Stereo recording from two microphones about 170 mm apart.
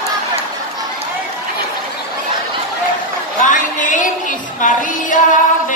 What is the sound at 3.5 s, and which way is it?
A woman's voice, 50° left (ahead or behind).